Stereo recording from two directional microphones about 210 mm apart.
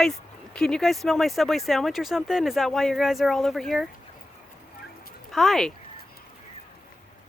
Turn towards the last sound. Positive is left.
turn(degrees=0)  # may be behind; listen again after turning